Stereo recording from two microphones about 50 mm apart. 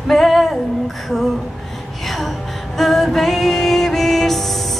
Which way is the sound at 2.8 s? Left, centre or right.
Centre.